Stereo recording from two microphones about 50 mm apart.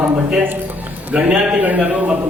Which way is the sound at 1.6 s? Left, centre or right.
Right.